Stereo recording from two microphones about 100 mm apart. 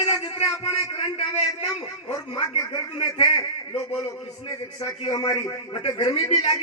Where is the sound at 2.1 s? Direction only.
45° left (ahead or behind).